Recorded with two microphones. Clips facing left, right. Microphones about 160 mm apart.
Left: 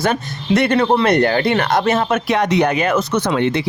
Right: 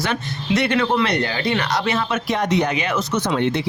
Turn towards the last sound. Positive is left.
turn(degrees=90)